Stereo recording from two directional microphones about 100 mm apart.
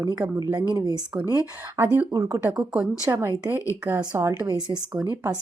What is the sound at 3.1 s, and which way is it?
Speech, 25° right (ahead or behind).